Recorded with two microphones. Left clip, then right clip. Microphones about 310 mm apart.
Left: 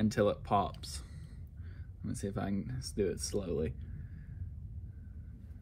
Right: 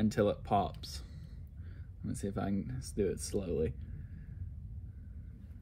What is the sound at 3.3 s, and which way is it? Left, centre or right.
Speech, left.